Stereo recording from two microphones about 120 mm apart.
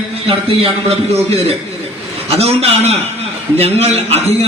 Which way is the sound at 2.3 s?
60° right (ahead or behind).